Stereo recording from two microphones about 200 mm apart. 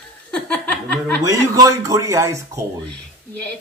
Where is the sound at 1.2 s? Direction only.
15° right (ahead or behind).